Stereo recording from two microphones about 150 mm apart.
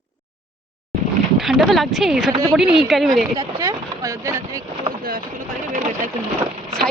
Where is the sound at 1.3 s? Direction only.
Centre (ahead or behind).